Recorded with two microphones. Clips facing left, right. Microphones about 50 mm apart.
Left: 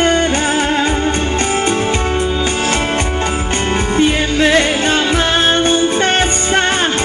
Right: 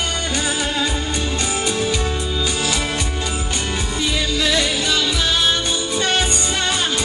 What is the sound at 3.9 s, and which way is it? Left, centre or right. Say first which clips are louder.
Music: left 8 dB; left.